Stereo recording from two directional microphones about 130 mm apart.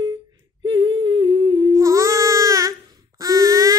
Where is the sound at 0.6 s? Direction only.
40° right (ahead or behind).